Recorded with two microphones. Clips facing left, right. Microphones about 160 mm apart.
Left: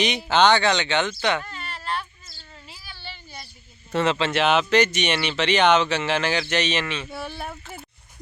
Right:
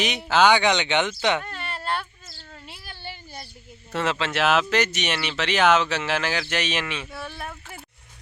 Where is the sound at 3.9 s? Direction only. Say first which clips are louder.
Left 4 dB; 5° right (ahead or behind).